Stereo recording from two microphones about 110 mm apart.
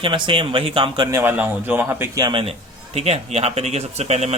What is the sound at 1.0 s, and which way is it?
A man's voice, 25° right (ahead or behind).